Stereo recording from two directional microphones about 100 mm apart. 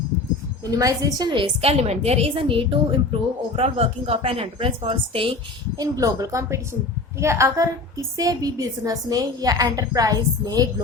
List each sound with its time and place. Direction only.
0.6 s a woman's voice: 35° right (ahead or behind)
1.3 s a woman's voice: 70° right (ahead or behind)
5.7 s a woman's voice: 35° right (ahead or behind)